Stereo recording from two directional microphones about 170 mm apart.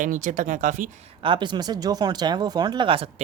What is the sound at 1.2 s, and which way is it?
Speech, 30° right (ahead or behind).